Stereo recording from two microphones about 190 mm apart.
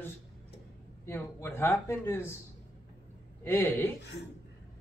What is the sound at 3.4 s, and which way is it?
Speech, 10° left (ahead or behind).